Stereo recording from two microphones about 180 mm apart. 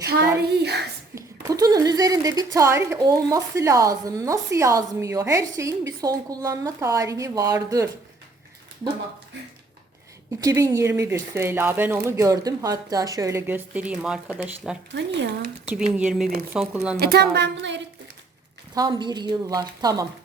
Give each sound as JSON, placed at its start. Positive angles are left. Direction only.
{"t": 0.4, "sound": "a sound", "side_deg": -65}
{"t": 1.1, "sound": "a sound", "side_deg": -20}
{"t": 3.2, "sound": "speech", "side_deg": -15}
{"t": 10.4, "sound": "speech", "side_deg": -15}
{"t": 14.9, "sound": "speech", "side_deg": -80}
{"t": 15.6, "sound": "speech", "side_deg": -5}
{"t": 17.0, "sound": "a woman's voice", "side_deg": -60}
{"t": 17.3, "sound": "speech", "side_deg": -75}
{"t": 18.7, "sound": "speech", "side_deg": -20}